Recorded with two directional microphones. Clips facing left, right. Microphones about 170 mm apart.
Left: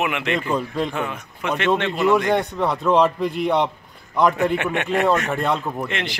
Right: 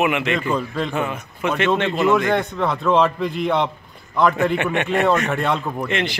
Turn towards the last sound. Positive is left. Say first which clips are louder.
# right 3 dB
turn(degrees=0)  # may be behind; listen again after turning